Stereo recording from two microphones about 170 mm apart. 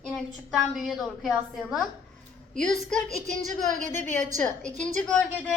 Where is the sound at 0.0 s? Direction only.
Centre (ahead or behind).